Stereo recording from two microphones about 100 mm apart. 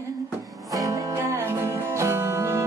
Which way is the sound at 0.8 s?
30° right (ahead or behind).